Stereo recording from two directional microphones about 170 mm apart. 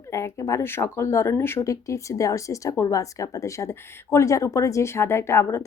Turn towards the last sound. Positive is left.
turn(degrees=15)  # may be behind; listen again after turning